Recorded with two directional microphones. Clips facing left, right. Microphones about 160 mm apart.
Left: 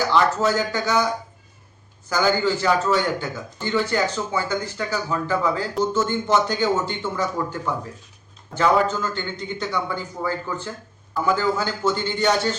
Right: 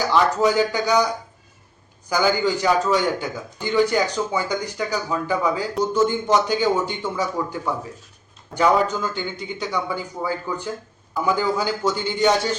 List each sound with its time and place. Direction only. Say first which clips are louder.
0.1 s a man's voice: right 3 dB; 15° right (ahead or behind)
2.0 s a man's voice: even; 15° right (ahead or behind)